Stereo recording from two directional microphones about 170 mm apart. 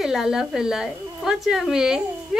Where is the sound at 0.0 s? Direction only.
5° right (ahead or behind).